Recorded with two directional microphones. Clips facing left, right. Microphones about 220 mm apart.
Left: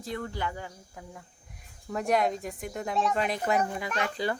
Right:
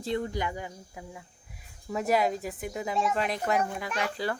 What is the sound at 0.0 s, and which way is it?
Speech, 20° right (ahead or behind).